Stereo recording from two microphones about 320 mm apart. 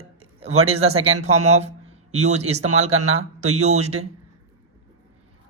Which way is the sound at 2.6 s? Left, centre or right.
Right.